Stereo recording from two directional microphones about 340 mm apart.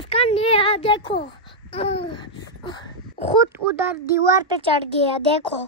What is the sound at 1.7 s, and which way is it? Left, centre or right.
Babbling, centre.